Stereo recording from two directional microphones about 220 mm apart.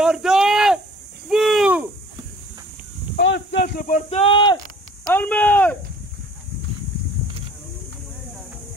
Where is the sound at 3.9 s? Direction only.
30° left (ahead or behind).